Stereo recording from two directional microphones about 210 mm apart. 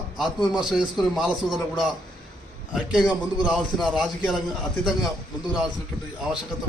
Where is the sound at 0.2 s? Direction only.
Centre (ahead or behind).